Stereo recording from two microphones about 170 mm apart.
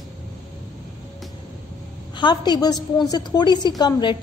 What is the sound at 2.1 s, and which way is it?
A woman's voice, 25° left (ahead or behind).